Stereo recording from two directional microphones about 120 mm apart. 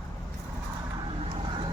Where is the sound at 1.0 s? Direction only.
45° right (ahead or behind).